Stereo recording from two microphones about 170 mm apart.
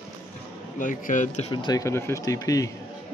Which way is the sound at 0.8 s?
50° left (ahead or behind).